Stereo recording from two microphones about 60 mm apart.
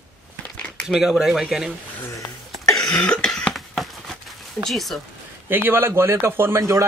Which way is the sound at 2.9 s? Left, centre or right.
Centre.